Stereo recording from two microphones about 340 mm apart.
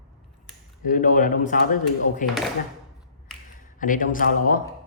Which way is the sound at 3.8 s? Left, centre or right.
Left.